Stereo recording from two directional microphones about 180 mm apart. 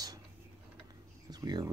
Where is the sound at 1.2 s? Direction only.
20° right (ahead or behind).